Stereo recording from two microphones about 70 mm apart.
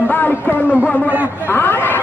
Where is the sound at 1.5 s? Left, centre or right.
Left.